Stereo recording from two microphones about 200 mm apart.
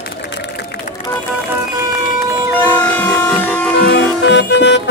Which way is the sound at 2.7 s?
5° left (ahead or behind).